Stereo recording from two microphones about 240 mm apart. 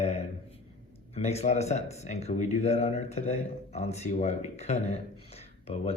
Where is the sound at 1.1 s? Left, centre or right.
Left.